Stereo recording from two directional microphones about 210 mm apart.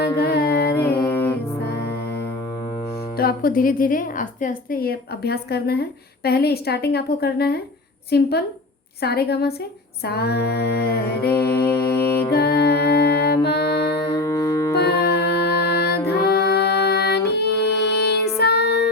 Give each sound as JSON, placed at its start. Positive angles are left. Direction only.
{"t": 0.2, "sound": "music", "side_deg": 50}
{"t": 0.8, "sound": "music", "side_deg": 10}
{"t": 1.6, "sound": "music", "side_deg": 50}
{"t": 3.2, "sound": "a woman's voice", "side_deg": 45}
{"t": 12.3, "sound": "music", "side_deg": 50}
{"t": 14.1, "sound": "music", "side_deg": 15}
{"t": 14.8, "sound": "music", "side_deg": 50}